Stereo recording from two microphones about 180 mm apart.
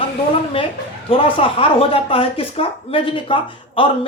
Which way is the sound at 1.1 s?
30° left (ahead or behind).